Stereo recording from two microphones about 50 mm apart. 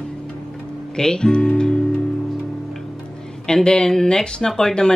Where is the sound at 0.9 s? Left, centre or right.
Centre.